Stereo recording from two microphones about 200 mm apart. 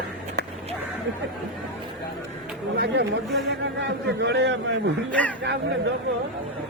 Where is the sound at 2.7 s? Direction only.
55° right (ahead or behind).